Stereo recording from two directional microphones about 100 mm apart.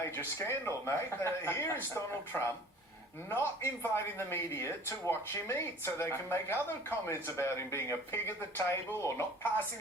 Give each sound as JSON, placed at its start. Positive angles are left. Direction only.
{"t": 0.0, "sound": "speech", "side_deg": 25}